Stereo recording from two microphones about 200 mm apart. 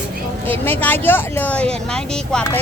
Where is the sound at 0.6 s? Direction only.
10° left (ahead or behind).